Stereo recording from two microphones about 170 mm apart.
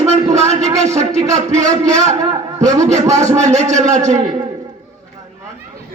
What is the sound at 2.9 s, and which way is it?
Speech, 40° right (ahead or behind).